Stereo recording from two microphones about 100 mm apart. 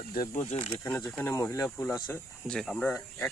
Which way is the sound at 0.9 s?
25° left (ahead or behind).